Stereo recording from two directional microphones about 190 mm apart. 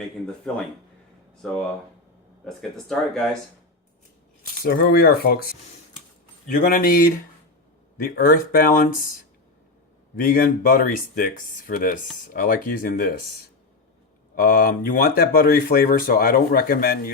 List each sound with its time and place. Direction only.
1.4 s speech: 5° left (ahead or behind)
4.6 s speech: 50° left (ahead or behind)
8.1 s speech: 50° left (ahead or behind)
10.2 s speech: 50° left (ahead or behind)
14.3 s speech: 50° left (ahead or behind)